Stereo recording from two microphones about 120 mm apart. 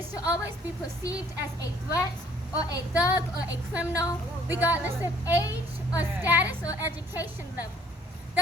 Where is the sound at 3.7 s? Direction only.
10° right (ahead or behind).